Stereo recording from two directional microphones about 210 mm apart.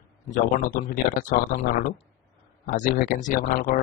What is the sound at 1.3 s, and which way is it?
Speech, 45° left (ahead or behind).